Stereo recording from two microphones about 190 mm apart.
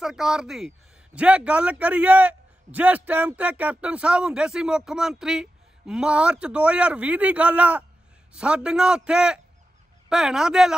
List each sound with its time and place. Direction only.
0.0 s a man's voice: 5° right (ahead or behind)